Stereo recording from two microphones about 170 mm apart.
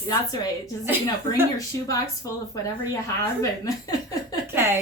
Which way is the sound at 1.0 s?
20° left (ahead or behind).